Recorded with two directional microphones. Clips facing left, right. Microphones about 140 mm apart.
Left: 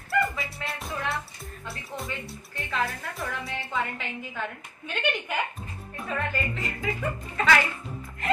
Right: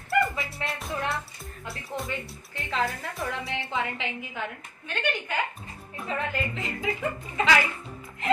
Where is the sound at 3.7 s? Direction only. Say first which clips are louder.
Left 1 dB; 15° right (ahead or behind).